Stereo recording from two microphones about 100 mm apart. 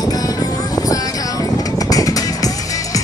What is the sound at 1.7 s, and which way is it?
Vehicle, 35° left (ahead or behind).